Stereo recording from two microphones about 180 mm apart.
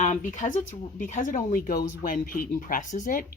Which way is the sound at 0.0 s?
40° left (ahead or behind).